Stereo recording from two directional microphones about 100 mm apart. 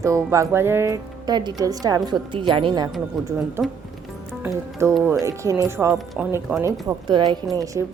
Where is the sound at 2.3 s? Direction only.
55° right (ahead or behind).